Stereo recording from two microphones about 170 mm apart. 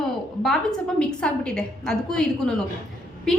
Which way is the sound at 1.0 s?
5° left (ahead or behind).